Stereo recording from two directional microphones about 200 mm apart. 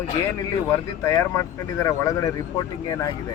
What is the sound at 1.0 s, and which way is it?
Speech, 15° left (ahead or behind).